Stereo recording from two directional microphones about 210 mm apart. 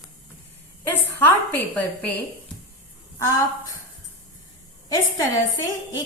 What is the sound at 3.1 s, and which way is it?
Speech, 15° left (ahead or behind).